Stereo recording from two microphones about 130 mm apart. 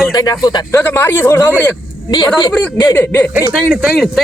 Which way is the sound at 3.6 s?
10° right (ahead or behind).